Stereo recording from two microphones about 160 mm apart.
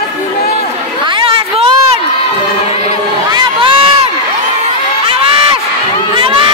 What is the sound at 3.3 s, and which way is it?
Crowd, 25° right (ahead or behind).